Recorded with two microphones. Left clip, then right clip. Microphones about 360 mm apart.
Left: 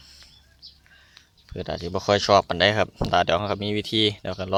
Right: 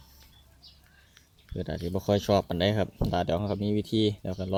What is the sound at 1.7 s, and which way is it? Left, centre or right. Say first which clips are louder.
Speech: left 5 dB; left.